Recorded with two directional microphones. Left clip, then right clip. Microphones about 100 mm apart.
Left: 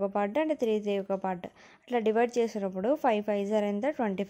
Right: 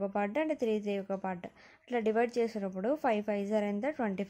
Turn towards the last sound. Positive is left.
turn(degrees=25)  # may be behind; listen again after turning